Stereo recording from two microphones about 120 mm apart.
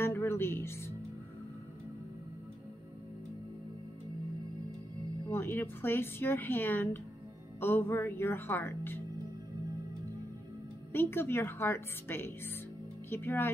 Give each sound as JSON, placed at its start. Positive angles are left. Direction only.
{"t": 0.0, "sound": "music", "side_deg": 20}
{"t": 5.3, "sound": "speech", "side_deg": 20}
{"t": 10.9, "sound": "speech", "side_deg": 20}